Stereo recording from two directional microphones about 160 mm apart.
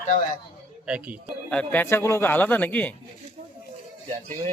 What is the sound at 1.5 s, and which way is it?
Speech, 10° left (ahead or behind).